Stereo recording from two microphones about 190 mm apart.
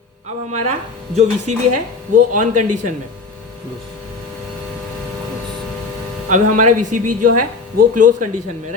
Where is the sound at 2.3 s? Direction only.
40° right (ahead or behind).